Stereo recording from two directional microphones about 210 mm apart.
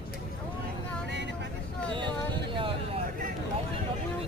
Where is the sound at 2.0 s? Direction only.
25° right (ahead or behind).